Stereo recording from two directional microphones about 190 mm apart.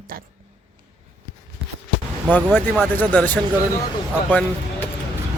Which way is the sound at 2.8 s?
10° left (ahead or behind).